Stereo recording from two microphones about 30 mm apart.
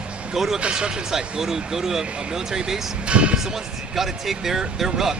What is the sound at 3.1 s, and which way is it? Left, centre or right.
Speech, right.